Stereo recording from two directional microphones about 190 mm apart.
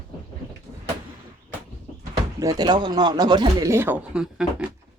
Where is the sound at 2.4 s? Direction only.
20° right (ahead or behind); by 4.6 s 5° right (ahead or behind).